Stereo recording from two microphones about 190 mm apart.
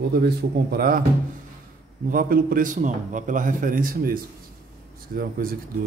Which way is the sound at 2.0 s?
50° right (ahead or behind).